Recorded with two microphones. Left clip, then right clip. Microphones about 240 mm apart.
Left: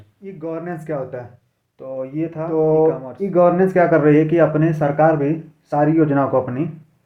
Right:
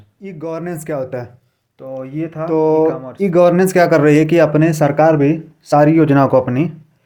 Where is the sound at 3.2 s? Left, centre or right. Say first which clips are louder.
Right 3 dB; right.